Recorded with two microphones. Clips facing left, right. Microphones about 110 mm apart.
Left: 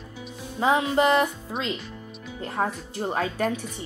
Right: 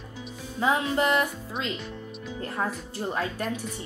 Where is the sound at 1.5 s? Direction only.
45° left (ahead or behind).